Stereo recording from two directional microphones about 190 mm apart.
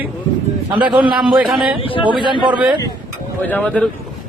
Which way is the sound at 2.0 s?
25° right (ahead or behind).